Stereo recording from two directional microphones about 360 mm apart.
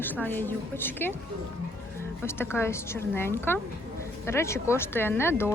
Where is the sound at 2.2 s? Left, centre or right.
Centre.